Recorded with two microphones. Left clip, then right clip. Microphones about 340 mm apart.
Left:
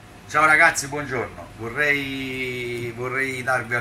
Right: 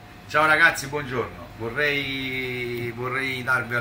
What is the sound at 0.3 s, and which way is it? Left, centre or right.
Speech, centre.